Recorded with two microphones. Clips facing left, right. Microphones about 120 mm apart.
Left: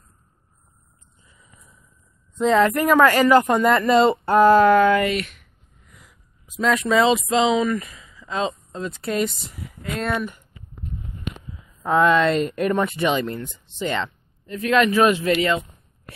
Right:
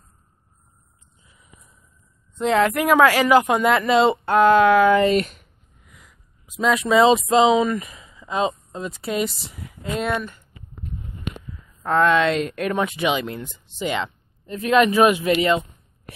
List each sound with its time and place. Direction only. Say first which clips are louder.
1.2 s a sound: left 1 dB; 5° right (ahead or behind)
2.3 s speech: left 1 dB; 5° right (ahead or behind)
5.0 s speech: right 5 dB; 35° right (ahead or behind)
5.9 s a sound: even; centre (ahead or behind)
6.6 s speech: right 2 dB; 15° right (ahead or behind)
9.8 s speech: right 2 dB; 20° right (ahead or behind)
11.8 s speech: left 1 dB; 5° left (ahead or behind); by 15.6 s 20° right (ahead or behind)